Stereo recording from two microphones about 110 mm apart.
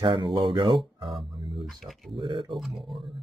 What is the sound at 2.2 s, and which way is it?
Speech, 50° right (ahead or behind).